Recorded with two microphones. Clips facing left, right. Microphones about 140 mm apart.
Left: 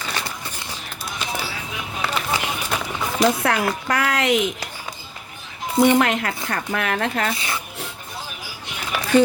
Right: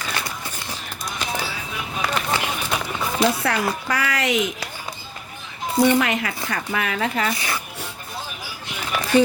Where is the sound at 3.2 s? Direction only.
50° left (ahead or behind).